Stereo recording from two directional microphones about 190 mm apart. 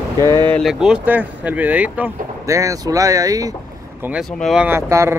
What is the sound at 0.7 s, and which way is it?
Speech, 5° right (ahead or behind).